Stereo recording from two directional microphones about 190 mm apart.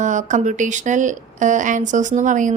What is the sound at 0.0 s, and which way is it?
A woman's voice, 40° right (ahead or behind).